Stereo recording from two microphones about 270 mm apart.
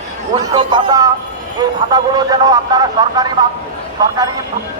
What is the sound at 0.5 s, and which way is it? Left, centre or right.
Speech, centre.